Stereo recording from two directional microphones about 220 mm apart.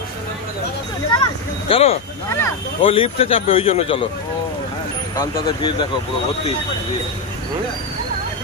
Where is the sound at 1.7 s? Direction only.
30° left (ahead or behind).